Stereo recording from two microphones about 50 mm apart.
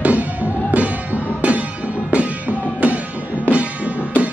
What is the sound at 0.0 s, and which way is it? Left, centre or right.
Music, right.